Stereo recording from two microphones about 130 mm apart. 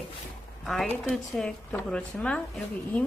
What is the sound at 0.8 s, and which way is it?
A woman's voice, 15° left (ahead or behind).